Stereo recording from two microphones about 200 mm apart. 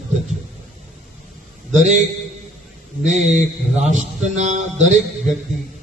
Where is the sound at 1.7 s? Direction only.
35° right (ahead or behind).